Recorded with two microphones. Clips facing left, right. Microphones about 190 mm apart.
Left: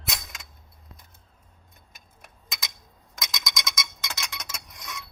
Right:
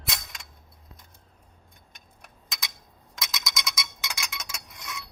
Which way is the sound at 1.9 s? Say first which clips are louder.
Left 1 dB; centre (ahead or behind).